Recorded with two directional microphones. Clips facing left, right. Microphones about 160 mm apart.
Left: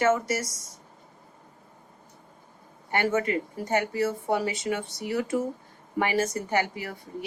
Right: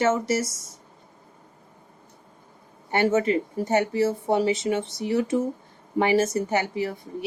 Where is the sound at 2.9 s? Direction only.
25° right (ahead or behind).